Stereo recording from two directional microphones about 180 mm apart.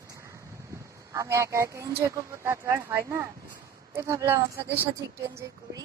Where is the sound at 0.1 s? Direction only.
15° right (ahead or behind).